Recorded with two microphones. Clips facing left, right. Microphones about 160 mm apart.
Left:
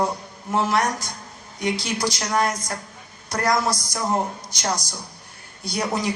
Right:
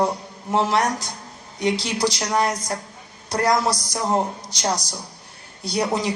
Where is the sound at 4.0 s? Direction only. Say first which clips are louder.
Right 2 dB; 15° right (ahead or behind).